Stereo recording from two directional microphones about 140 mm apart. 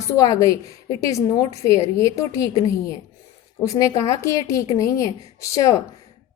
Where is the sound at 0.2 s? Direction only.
25° left (ahead or behind).